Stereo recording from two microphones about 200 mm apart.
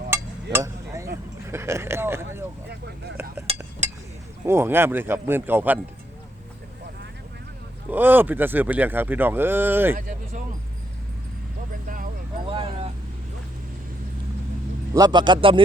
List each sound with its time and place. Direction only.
0.5 s a sound: 15° right (ahead or behind)
1.5 s speech: 15° right (ahead or behind)
2.6 s speech: 55° right (ahead or behind)
3.5 s a sound: 30° right (ahead or behind)
4.4 s speech: 10° right (ahead or behind)
7.9 s speech: 10° right (ahead or behind)
12.5 s vehicle: 25° right (ahead or behind)
14.9 s a man's voice: 20° right (ahead or behind)